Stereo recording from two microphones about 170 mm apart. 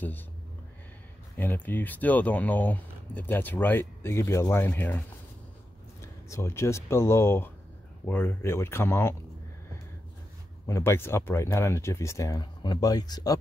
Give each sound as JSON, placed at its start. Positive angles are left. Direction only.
{"t": 1.3, "sound": "speech", "side_deg": 10}
{"t": 10.7, "sound": "speech", "side_deg": 15}